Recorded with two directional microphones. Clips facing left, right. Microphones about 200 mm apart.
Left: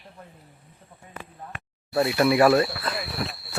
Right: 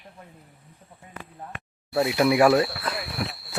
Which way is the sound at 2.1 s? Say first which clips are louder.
Even; 10° right (ahead or behind).